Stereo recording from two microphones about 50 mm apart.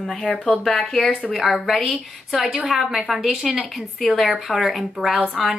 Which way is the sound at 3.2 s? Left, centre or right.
Centre.